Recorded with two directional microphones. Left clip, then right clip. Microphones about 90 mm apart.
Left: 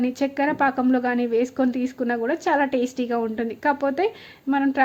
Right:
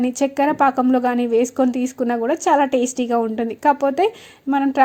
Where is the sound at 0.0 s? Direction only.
40° right (ahead or behind).